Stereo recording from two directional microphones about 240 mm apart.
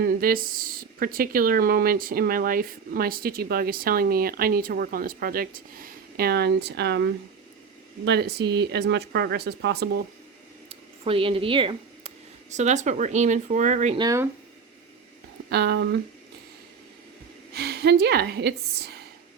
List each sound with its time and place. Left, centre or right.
0.0 s a woman's voice: right
10.7 s scissors: right
12.5 s a woman's voice: right
14.0 s speech: centre
15.4 s speech: right
17.5 s a woman's voice: right